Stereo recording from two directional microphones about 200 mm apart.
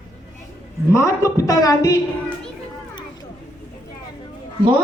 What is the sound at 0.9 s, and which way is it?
A woman's voice, 15° left (ahead or behind).